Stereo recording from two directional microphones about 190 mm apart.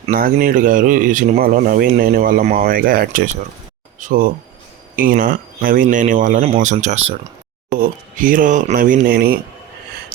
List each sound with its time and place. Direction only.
0.1 s speech: 50° right (ahead or behind); by 7.2 s 35° right (ahead or behind)
7.7 s speech: 45° right (ahead or behind)